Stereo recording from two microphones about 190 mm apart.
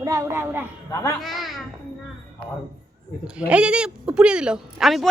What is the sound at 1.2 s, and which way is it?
Speech, centre (ahead or behind).